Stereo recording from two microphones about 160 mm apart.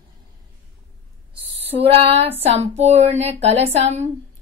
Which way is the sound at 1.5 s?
40° right (ahead or behind).